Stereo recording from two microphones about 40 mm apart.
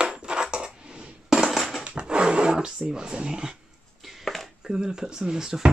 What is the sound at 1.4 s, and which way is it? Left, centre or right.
Crushing, centre.